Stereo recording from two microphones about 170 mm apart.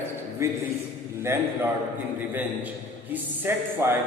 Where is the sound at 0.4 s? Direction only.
15° right (ahead or behind).